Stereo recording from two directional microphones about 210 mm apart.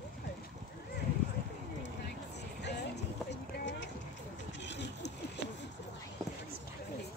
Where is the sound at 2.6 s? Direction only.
55° left (ahead or behind).